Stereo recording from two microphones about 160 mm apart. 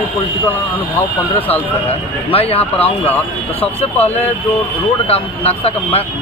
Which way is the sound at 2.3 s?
35° left (ahead or behind).